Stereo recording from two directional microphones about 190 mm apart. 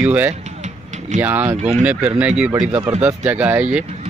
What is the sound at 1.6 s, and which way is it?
Speech, 35° right (ahead or behind).